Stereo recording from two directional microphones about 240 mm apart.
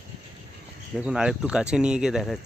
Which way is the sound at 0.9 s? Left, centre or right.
Centre.